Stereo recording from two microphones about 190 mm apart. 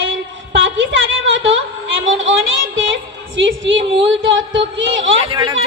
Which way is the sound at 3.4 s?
85° right.